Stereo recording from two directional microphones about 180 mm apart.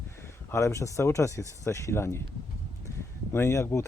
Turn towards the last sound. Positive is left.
turn(degrees=15)  # may be behind; listen again after turning